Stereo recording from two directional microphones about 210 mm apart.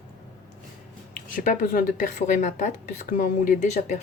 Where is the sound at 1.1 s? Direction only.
40° left (ahead or behind).